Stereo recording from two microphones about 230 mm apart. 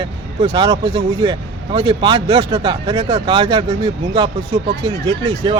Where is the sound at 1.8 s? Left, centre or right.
Right.